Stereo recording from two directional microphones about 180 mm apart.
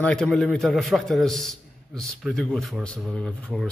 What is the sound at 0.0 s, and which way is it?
A man's voice, 5° left (ahead or behind).